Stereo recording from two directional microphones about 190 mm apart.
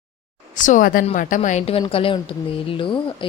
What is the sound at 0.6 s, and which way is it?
A woman's voice, 40° left (ahead or behind).